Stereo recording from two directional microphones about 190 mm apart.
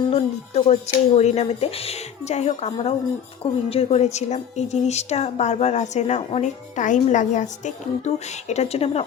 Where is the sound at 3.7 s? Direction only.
30° left (ahead or behind).